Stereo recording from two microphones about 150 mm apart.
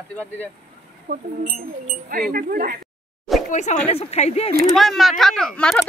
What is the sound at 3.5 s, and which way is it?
Speech, 50° left (ahead or behind).